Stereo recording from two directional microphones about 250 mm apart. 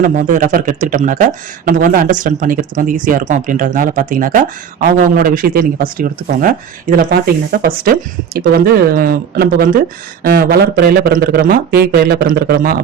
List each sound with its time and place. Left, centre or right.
0.0 s speech: right